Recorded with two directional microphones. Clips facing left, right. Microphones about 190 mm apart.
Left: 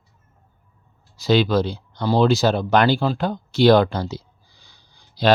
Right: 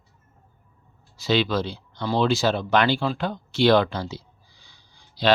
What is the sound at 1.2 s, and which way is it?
Speech, 40° left (ahead or behind).